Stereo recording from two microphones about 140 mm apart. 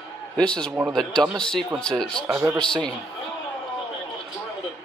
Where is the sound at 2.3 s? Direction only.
15° right (ahead or behind).